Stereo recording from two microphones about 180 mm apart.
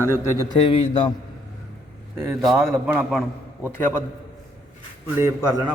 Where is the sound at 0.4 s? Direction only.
30° left (ahead or behind).